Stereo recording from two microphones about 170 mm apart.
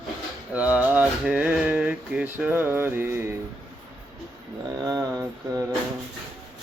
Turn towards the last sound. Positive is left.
turn(degrees=-20)  # may be behind; listen again after turning